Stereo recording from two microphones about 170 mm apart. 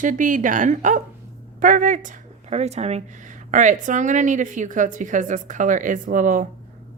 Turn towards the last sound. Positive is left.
turn(degrees=-50)  # may be behind; listen again after turning